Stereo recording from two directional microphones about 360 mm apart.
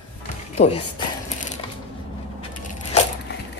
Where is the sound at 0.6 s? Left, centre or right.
Centre.